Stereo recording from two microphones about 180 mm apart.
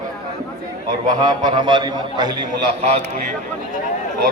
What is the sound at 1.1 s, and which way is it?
A man's voice, 20° right (ahead or behind).